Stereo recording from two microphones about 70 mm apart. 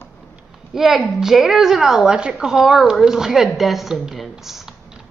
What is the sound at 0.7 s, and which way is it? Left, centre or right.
A woman's voice, centre.